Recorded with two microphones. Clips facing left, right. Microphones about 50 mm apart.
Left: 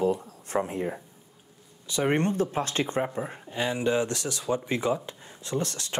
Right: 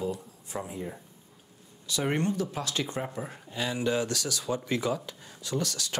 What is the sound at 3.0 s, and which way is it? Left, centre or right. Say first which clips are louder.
Speech: left 4 dB; left.